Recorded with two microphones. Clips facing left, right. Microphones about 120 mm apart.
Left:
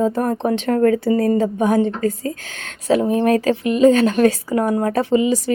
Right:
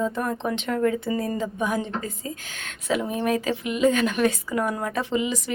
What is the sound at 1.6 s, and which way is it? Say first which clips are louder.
Speech: left 10 dB; 50° left (ahead or behind).